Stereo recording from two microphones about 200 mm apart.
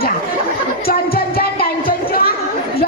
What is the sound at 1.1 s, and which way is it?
Music, 50° left (ahead or behind).